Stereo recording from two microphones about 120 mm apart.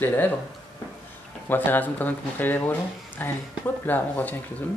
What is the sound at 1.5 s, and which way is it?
Speech, 15° left (ahead or behind).